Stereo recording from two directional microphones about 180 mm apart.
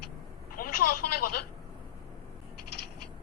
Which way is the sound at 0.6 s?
50° left (ahead or behind).